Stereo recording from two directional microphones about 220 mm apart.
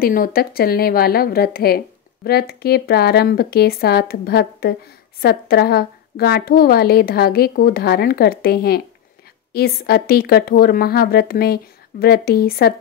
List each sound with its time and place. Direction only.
0.0 s a woman's voice: 40° left (ahead or behind)